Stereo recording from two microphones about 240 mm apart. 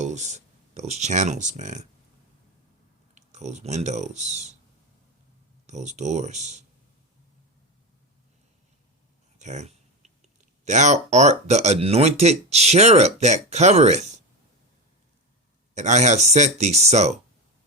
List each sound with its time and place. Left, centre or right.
0.0 s speech: right
3.2 s speech: right
5.6 s speech: right
9.4 s a sound: right
10.7 s speech: right
15.7 s speech: right